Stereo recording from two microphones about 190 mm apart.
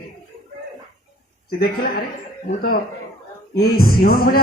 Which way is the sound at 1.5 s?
55° left (ahead or behind).